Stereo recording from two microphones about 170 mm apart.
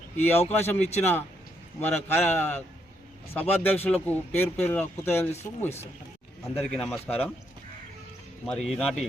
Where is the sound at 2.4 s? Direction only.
10° left (ahead or behind).